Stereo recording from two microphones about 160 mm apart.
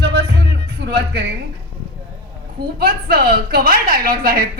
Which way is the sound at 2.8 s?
70° right (ahead or behind).